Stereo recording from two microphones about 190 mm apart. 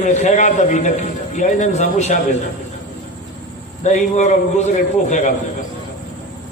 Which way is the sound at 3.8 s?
40° left (ahead or behind).